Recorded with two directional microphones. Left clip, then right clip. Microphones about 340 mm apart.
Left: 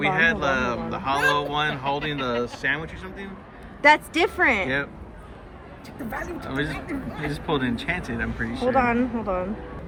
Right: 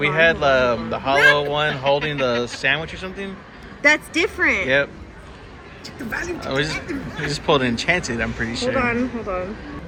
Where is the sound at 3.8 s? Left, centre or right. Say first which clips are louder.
Right 1 dB; left.